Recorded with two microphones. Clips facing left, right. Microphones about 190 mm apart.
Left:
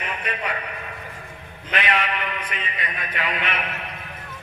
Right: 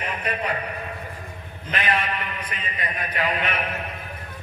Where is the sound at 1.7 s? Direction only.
35° right (ahead or behind).